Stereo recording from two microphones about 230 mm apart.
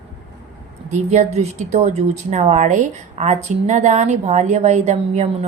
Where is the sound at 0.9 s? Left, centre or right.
Right.